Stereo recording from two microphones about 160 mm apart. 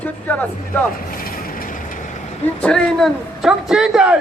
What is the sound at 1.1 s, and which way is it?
Vehicle, 65° left (ahead or behind).